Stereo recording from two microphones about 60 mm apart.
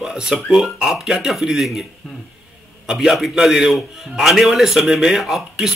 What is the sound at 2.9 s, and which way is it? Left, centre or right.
A man's voice, centre.